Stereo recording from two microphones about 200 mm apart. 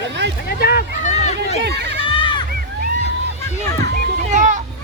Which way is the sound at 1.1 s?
35° left (ahead or behind).